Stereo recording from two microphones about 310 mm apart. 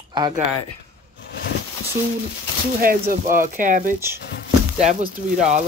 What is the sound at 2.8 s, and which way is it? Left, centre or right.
Speech, right.